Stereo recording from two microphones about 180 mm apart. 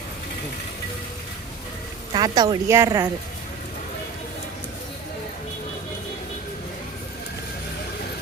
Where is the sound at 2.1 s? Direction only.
20° right (ahead or behind).